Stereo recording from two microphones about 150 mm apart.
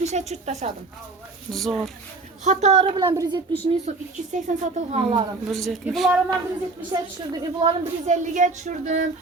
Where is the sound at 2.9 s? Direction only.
25° right (ahead or behind).